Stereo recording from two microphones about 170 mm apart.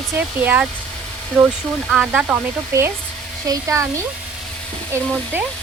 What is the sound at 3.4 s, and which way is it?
Speech, 20° right (ahead or behind).